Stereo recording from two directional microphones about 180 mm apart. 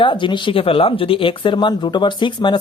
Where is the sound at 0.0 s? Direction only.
25° left (ahead or behind).